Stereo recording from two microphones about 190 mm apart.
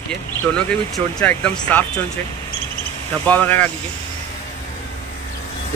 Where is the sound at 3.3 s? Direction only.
10° left (ahead or behind).